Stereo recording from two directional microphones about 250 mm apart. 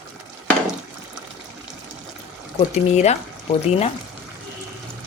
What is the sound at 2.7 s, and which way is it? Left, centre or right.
Speech, left.